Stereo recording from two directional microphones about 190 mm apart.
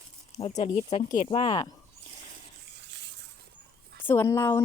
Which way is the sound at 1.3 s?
25° left (ahead or behind).